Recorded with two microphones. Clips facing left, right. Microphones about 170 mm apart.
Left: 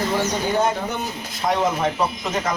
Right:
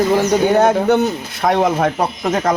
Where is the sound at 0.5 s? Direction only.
70° right (ahead or behind).